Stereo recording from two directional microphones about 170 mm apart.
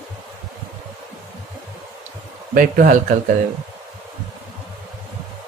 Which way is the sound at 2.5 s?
55° right (ahead or behind).